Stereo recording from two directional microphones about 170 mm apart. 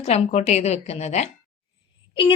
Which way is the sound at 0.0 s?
40° left (ahead or behind).